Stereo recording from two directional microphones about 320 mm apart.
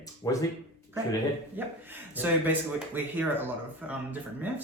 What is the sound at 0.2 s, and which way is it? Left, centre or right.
Speech, centre.